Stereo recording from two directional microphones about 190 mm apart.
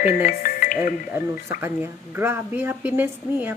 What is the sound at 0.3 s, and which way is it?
Speech, 45° left (ahead or behind).